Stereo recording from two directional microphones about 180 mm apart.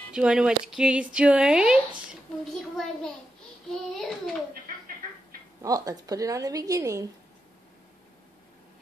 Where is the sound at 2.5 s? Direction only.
Centre (ahead or behind).